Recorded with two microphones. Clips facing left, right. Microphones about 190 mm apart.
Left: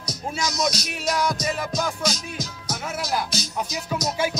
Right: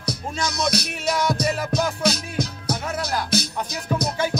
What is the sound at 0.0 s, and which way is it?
Music, 60° right (ahead or behind).